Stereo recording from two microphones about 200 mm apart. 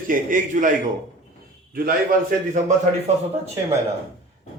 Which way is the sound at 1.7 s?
45° right (ahead or behind).